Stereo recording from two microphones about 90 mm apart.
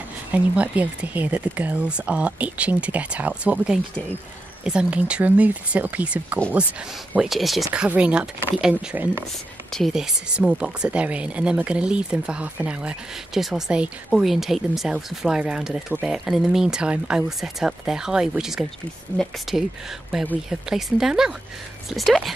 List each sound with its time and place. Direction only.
0.3 s speech: 15° right (ahead or behind)
7.2 s speech: centre (ahead or behind)
7.7 s speech: 10° right (ahead or behind)
8.9 s speech: 20° right (ahead or behind)
9.7 s speech: 5° left (ahead or behind)
9.9 s speech: 10° right (ahead or behind)